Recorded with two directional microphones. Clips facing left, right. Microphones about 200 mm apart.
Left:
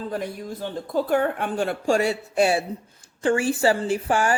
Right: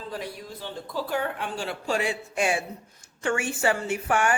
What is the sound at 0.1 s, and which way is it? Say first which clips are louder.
Speech: left 6 dB; 50° left (ahead or behind).